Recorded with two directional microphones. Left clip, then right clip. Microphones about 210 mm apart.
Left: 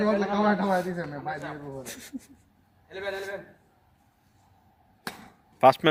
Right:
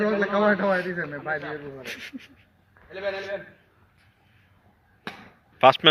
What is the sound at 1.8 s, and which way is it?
Speech, 15° left (ahead or behind).